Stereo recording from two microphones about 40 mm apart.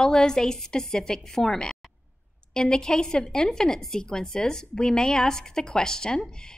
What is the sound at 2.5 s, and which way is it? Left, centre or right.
A woman's voice, centre.